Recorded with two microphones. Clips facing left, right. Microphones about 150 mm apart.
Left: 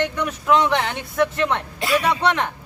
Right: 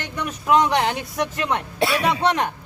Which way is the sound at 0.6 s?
15° right (ahead or behind).